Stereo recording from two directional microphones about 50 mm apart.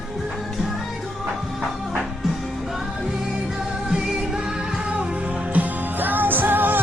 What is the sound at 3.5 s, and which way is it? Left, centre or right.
Music, centre.